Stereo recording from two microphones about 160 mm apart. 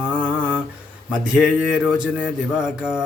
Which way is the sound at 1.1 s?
5° right (ahead or behind).